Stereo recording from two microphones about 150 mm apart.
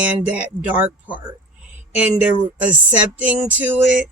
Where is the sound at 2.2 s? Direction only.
10° right (ahead or behind).